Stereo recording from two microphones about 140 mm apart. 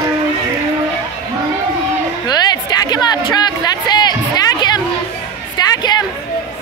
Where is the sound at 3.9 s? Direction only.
30° left (ahead or behind).